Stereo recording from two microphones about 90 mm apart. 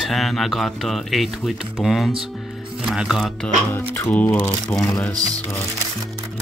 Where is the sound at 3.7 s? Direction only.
30° left (ahead or behind).